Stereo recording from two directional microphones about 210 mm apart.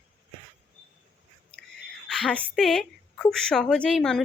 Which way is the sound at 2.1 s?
5° left (ahead or behind).